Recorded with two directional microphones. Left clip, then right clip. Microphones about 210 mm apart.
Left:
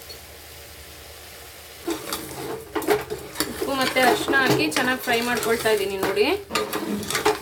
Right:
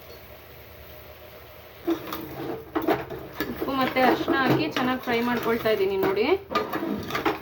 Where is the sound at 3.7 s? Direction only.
10° left (ahead or behind).